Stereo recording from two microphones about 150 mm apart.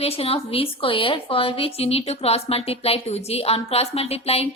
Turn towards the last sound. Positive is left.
turn(degrees=40)  # may be behind; listen again after turning